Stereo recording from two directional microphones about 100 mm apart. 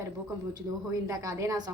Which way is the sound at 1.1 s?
30° right (ahead or behind).